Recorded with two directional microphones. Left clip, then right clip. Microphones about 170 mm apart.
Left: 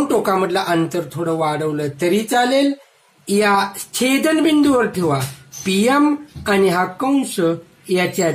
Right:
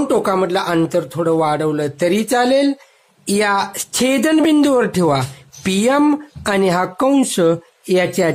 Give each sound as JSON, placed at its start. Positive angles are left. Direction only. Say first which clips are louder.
{"t": 0.1, "sound": "speech", "louder": "right 2 dB", "side_deg": -30}
{"t": 3.3, "sound": "speech", "louder": "left 1 dB", "side_deg": -45}